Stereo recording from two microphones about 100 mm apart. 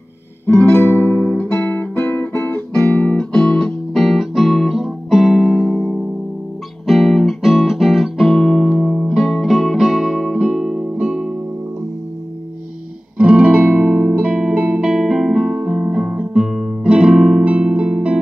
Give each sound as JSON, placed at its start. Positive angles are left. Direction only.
{"t": 0.5, "sound": "guitar", "side_deg": 20}
{"t": 2.7, "sound": "music", "side_deg": 10}
{"t": 10.4, "sound": "guitar", "side_deg": -5}
{"t": 13.2, "sound": "music", "side_deg": -10}